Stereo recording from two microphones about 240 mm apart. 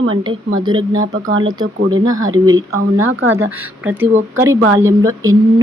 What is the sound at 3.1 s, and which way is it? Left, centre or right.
Speech, right.